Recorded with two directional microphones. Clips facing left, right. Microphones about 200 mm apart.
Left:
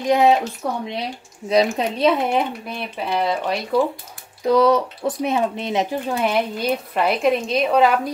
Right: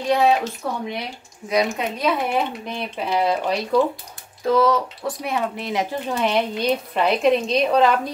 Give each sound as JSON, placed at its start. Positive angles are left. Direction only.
{"t": 0.1, "sound": "speech", "side_deg": 20}
{"t": 1.5, "sound": "speech", "side_deg": 30}
{"t": 2.6, "sound": "a woman's voice", "side_deg": 0}
{"t": 4.5, "sound": "a woman's voice", "side_deg": 20}